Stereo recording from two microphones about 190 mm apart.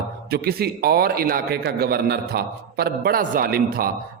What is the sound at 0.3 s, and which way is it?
A man's voice, 55° right (ahead or behind).